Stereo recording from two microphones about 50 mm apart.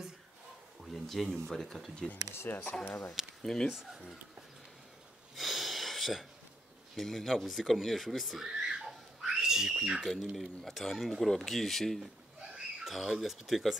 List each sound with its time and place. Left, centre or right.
0.9 s speech: centre
2.3 s speech: left
3.4 s speech: centre
5.3 s a sound: centre
7.0 s speech: centre
8.5 s a sound: centre
10.6 s speech: centre
12.5 s speech: centre